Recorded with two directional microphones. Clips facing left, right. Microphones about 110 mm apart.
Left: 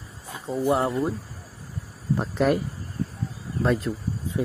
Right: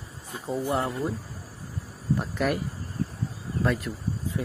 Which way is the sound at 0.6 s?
30° left (ahead or behind).